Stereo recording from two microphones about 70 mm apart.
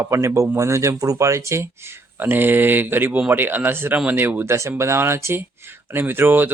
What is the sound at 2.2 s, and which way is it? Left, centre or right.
Speech, right.